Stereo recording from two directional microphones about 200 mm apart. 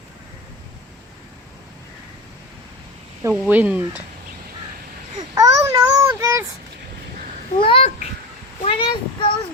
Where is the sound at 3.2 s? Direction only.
10° right (ahead or behind).